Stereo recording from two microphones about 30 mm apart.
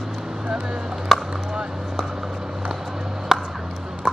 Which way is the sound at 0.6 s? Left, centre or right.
Right.